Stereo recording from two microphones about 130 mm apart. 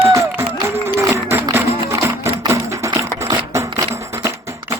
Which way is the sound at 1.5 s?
20° right (ahead or behind).